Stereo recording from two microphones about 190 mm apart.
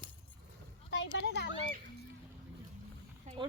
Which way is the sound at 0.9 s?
70° left (ahead or behind).